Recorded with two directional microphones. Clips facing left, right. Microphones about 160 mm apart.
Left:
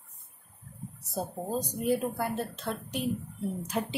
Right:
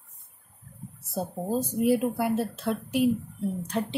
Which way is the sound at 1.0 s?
Centre (ahead or behind).